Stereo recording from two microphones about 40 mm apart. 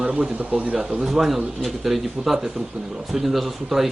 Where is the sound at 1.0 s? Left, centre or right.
Centre.